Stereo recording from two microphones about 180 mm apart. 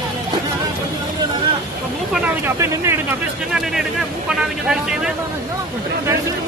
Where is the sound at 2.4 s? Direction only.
15° right (ahead or behind).